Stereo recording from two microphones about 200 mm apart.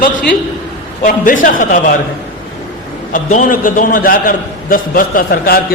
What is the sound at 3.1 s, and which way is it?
A man's voice, 40° left (ahead or behind).